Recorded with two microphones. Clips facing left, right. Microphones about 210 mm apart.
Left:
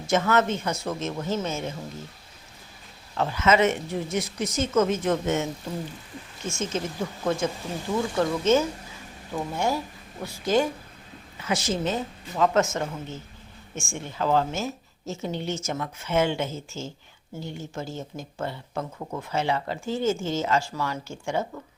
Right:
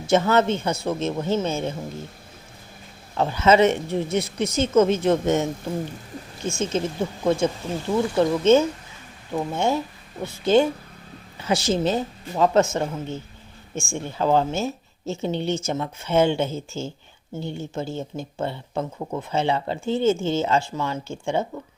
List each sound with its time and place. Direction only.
0.1 s speech: 30° right (ahead or behind)
3.2 s a woman's voice: 30° right (ahead or behind)
6.5 s a woman's voice: 30° right (ahead or behind)